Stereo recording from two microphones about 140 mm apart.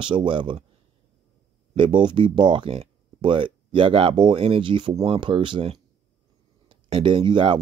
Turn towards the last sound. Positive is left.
turn(degrees=-35)  # may be behind; listen again after turning